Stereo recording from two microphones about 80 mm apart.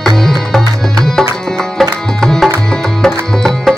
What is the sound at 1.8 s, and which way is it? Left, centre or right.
Music, centre.